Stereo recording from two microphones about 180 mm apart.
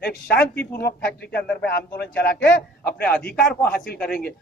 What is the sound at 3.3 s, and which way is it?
Speech, 5° left (ahead or behind).